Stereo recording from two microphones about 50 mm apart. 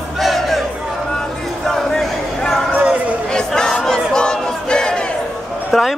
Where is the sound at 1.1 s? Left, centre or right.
Centre.